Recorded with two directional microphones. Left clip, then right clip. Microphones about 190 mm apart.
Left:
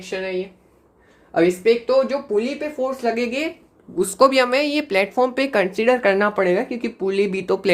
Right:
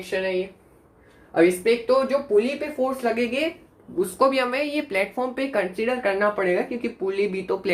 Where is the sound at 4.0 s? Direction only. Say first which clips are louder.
Left 5 dB; 60° left (ahead or behind).